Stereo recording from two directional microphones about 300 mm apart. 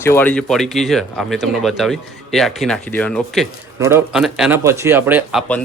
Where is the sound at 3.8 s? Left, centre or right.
Centre.